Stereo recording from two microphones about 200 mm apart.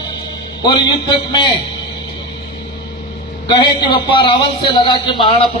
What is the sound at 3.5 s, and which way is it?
A man's voice, 20° left (ahead or behind).